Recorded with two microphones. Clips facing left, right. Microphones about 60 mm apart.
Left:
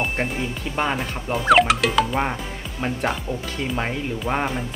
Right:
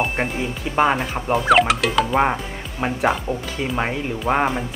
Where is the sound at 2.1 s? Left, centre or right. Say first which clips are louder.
Right 5 dB; centre.